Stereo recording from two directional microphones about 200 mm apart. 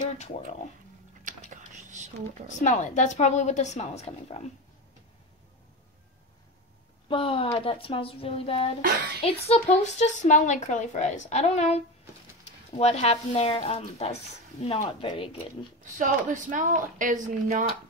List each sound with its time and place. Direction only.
1.3 s whispering: 40° right (ahead or behind)
2.6 s speech: 35° left (ahead or behind)
7.1 s speech: 25° left (ahead or behind)
8.8 s speech: 50° right (ahead or behind)
9.2 s speech: 35° left (ahead or behind)
15.8 s a woman's voice: 40° right (ahead or behind)